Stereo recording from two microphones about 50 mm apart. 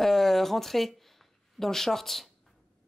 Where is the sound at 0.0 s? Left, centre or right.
Centre.